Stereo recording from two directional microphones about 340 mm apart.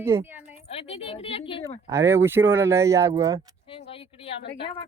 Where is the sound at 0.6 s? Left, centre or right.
Centre.